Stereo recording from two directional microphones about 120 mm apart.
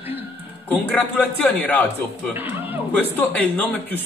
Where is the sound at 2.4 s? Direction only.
15° right (ahead or behind).